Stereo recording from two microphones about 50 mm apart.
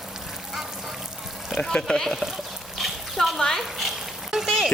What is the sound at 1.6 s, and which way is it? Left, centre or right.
Speech, centre.